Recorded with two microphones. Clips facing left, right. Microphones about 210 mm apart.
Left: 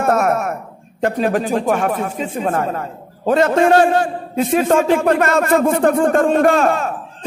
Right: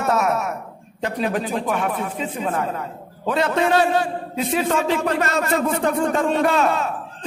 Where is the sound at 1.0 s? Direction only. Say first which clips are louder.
Left 6 dB; 50° left (ahead or behind).